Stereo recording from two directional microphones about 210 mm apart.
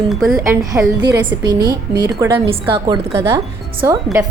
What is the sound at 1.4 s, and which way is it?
A woman's voice, 15° right (ahead or behind).